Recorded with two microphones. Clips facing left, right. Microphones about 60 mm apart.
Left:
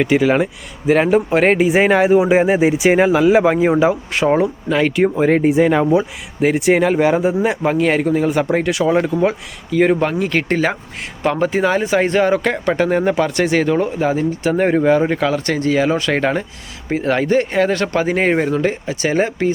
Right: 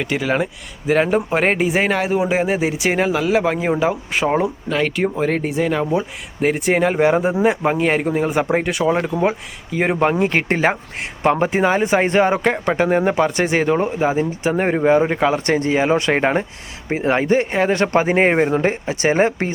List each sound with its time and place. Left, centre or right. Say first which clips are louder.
0.0 s speech: left 6 dB; centre
1.7 s speech: left 6 dB; centre
9.7 s speech: left 2 dB; centre; by 19.5 s right